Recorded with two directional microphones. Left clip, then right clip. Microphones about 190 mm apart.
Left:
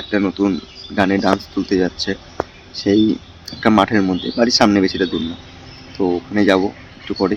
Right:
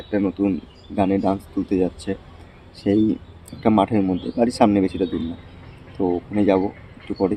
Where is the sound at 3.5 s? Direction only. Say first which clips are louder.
Left 4 dB; centre (ahead or behind).